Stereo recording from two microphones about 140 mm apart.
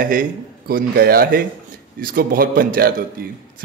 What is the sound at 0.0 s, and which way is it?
A man's voice, 80° right.